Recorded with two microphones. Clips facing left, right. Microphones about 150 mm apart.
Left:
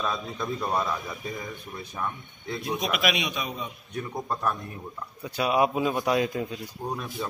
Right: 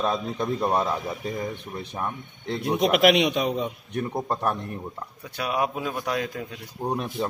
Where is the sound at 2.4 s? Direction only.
65° right (ahead or behind).